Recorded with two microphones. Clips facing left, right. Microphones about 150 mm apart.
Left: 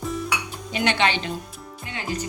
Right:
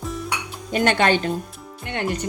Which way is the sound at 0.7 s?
45° right (ahead or behind).